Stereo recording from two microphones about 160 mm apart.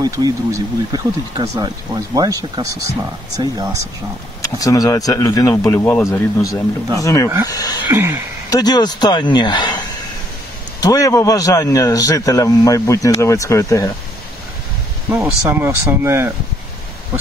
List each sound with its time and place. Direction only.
0.0 s speech: 25° right (ahead or behind)
4.4 s a man's voice: 20° left (ahead or behind)
7.9 s speech: 15° right (ahead or behind)
8.5 s a man's voice: 25° left (ahead or behind)
15.4 s speech: 15° right (ahead or behind)